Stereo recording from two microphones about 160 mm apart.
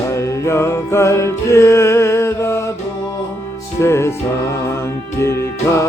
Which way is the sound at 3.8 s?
15° left (ahead or behind).